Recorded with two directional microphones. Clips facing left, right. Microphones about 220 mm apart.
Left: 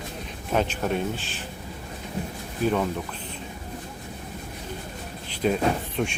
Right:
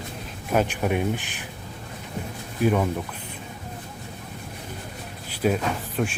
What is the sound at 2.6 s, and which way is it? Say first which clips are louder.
Speech: right 2 dB; 10° right (ahead or behind).